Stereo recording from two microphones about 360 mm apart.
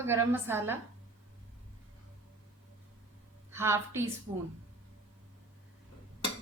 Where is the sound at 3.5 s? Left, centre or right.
Centre.